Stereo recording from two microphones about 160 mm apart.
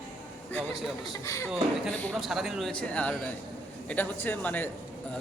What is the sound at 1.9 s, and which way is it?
Speech, 10° left (ahead or behind).